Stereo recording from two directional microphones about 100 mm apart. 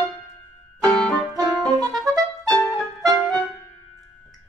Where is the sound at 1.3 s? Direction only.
35° right (ahead or behind).